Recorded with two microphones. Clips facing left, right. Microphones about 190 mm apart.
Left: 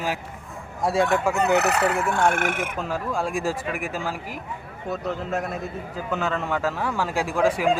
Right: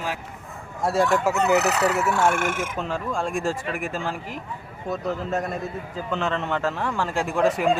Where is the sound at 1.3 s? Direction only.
55° left (ahead or behind).